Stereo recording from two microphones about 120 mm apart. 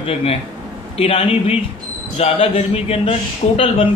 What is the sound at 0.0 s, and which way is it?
A man's voice, 55° left (ahead or behind).